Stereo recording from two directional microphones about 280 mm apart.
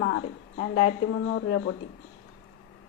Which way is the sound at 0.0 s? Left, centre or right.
Left.